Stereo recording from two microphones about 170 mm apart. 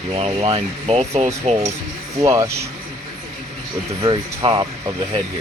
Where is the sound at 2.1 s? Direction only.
20° right (ahead or behind).